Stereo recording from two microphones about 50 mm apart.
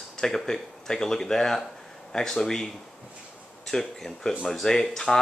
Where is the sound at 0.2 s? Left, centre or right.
Centre.